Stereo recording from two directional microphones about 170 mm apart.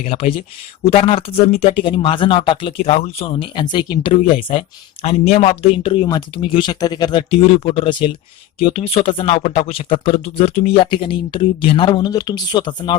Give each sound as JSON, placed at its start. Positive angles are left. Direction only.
{"t": 0.0, "sound": "speech", "side_deg": 35}